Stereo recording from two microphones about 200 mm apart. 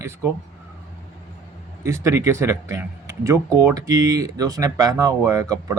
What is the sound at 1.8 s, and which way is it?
Speech, 15° right (ahead or behind).